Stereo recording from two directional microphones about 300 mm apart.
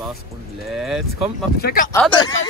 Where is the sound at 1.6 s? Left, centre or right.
Left.